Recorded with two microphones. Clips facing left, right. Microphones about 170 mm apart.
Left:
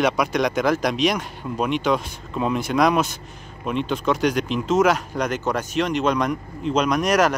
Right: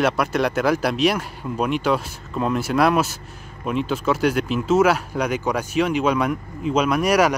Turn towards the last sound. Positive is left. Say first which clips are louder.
# right 1 dB
turn(degrees=-10)  # may be behind; listen again after turning